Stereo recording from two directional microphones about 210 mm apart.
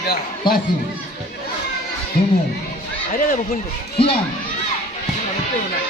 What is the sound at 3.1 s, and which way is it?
Speech, 40° left (ahead or behind).